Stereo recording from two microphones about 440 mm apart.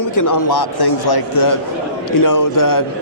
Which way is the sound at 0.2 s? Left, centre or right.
Left.